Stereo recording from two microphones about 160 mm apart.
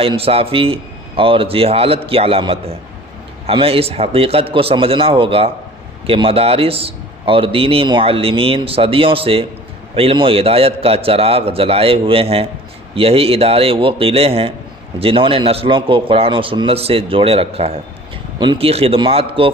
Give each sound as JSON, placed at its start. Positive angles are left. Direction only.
{"t": 0.0, "sound": "a man's voice", "side_deg": -35}